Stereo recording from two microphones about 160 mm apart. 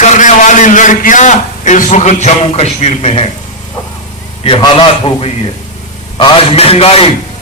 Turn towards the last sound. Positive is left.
turn(degrees=40)  # may be behind; listen again after turning